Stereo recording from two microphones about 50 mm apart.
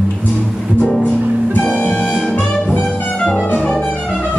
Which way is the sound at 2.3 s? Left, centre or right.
Left.